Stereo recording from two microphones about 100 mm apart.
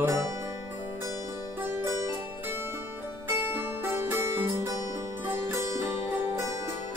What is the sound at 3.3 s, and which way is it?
Music, 25° right (ahead or behind).